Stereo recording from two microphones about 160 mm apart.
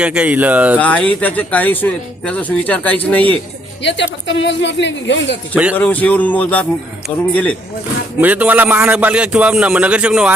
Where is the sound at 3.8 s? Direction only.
90° left.